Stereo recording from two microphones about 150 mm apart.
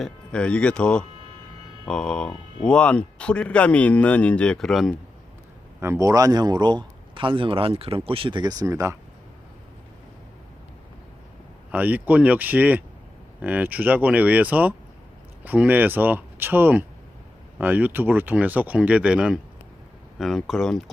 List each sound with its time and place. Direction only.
0.0 s speech: 5° left (ahead or behind)
5.8 s speech: 20° right (ahead or behind)
11.7 s speech: 10° right (ahead or behind)